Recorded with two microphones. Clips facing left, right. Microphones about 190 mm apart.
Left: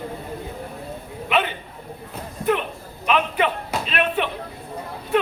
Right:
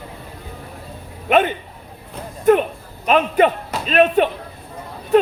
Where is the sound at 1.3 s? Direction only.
50° right (ahead or behind).